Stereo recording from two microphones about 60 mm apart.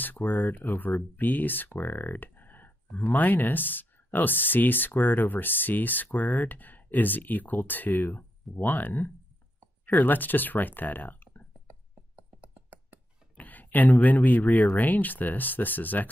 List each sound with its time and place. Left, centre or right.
0.0 s speech: left
1.8 s computer keyboard: left
3.1 s speech: left
12.2 s a sound: right
13.4 s speech: left